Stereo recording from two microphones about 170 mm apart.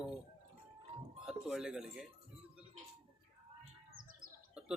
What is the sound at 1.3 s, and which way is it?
Speech, 5° right (ahead or behind).